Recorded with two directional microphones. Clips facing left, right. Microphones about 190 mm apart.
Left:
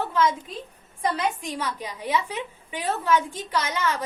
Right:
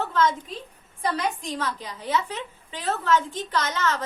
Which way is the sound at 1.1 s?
10° left (ahead or behind).